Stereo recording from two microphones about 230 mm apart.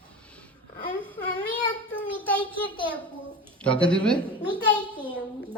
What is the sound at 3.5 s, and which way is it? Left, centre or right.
Speech, centre.